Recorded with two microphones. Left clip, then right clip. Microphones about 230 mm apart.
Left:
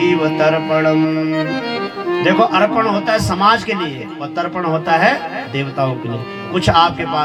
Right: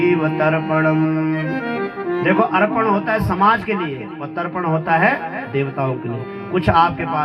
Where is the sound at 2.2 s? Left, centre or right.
Left.